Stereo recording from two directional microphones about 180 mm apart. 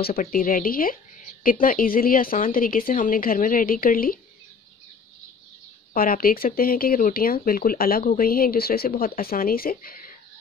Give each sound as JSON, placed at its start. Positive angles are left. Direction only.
{"t": 0.0, "sound": "speech", "side_deg": 55}
{"t": 5.9, "sound": "speech", "side_deg": 55}